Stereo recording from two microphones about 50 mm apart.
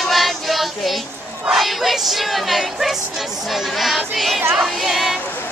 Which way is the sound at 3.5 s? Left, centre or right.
Centre.